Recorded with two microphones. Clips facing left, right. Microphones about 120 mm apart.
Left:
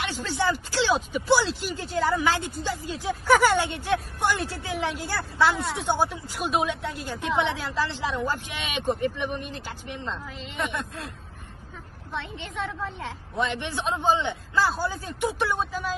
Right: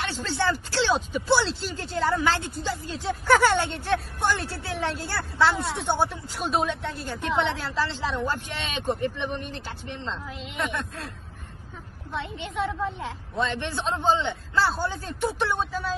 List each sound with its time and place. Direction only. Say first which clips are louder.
0.0 s a woman's voice: even; 15° left (ahead or behind)
10.3 s a woman's voice: right 1 dB; centre (ahead or behind)
12.1 s a woman's voice: right 2 dB; centre (ahead or behind)
13.4 s a woman's voice: even; 15° left (ahead or behind)